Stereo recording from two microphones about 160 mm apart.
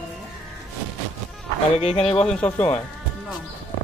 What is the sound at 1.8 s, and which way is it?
Speech, 40° left (ahead or behind).